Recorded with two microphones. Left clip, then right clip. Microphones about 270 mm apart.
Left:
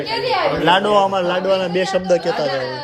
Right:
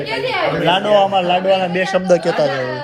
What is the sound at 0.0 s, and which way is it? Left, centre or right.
Speech, left.